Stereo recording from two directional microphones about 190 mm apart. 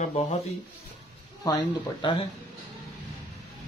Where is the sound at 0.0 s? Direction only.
35° left (ahead or behind).